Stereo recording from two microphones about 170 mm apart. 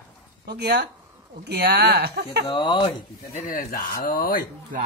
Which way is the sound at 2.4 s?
30° left (ahead or behind).